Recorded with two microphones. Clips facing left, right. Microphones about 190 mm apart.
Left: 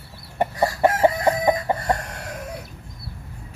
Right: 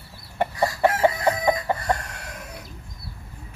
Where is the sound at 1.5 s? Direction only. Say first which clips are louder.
Left 2 dB; 20° left (ahead or behind).